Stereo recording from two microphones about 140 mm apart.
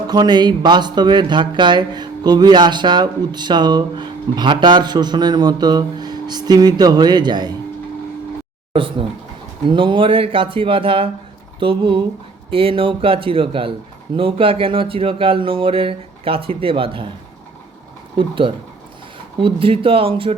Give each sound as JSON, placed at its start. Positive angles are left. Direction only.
{"t": 0.1, "sound": "speech", "side_deg": -30}
{"t": 8.7, "sound": "speech", "side_deg": -40}
{"t": 18.2, "sound": "speech", "side_deg": -40}